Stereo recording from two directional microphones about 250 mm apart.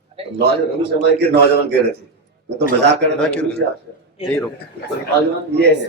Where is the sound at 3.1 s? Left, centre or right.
Centre.